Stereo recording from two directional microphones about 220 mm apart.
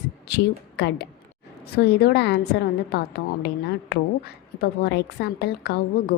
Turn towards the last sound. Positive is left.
turn(degrees=45)  # may be behind; listen again after turning